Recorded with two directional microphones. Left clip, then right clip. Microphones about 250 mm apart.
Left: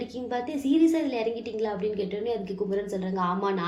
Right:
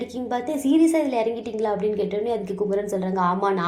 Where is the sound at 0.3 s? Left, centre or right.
Centre.